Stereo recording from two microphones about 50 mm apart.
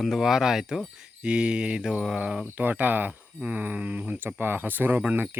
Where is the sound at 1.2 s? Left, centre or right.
Centre.